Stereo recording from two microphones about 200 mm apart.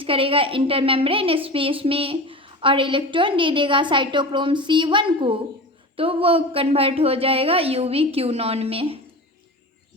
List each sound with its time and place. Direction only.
0.0 s a woman's voice: 25° right (ahead or behind)